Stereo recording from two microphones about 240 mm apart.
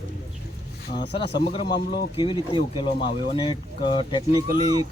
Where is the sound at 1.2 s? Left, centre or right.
Left.